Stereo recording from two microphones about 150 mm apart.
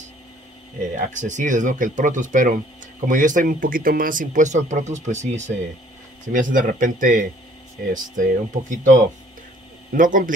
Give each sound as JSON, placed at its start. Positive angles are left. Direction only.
{"t": 0.9, "sound": "speech", "side_deg": -55}